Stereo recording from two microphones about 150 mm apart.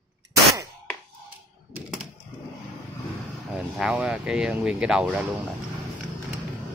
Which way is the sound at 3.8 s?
5° right (ahead or behind).